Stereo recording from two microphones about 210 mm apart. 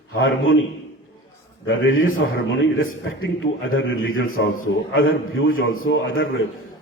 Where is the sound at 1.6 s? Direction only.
75° left (ahead or behind).